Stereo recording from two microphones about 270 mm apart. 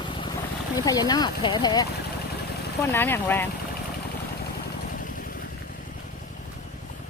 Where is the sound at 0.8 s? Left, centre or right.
Centre.